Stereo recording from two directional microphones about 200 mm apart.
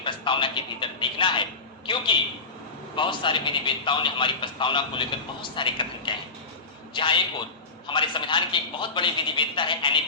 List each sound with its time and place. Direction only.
0.0 s speech: 25° left (ahead or behind)
2.9 s a man's voice: 25° left (ahead or behind)